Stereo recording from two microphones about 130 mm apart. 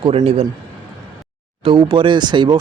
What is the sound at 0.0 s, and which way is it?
Speech, 50° right (ahead or behind).